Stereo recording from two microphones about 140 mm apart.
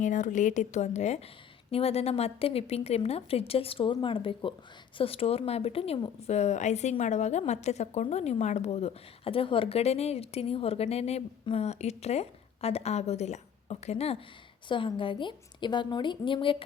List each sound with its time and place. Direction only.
0.0 s a woman's voice: 65° left (ahead or behind); by 14.2 s 50° left (ahead or behind)
14.7 s a woman's voice: 35° left (ahead or behind)